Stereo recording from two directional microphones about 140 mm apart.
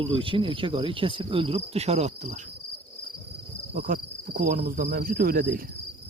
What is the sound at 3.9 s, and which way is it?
Cricket, 90° right.